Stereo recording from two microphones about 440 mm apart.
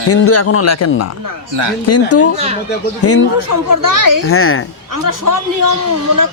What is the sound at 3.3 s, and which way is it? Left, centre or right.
Speech, right.